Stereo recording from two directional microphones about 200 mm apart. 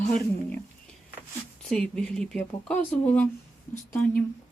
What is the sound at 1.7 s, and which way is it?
Speech, 5° left (ahead or behind).